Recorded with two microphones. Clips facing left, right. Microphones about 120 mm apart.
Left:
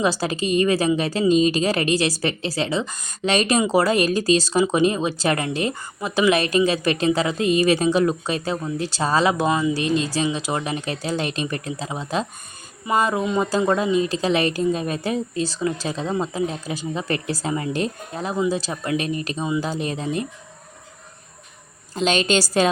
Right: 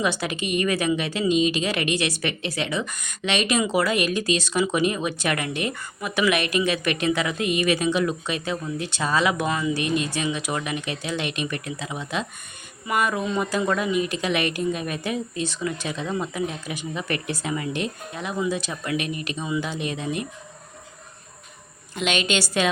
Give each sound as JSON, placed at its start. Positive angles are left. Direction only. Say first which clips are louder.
{"t": 0.0, "sound": "speech", "louder": "left 4 dB", "side_deg": 35}
{"t": 21.9, "sound": "speech", "louder": "left 4 dB", "side_deg": 35}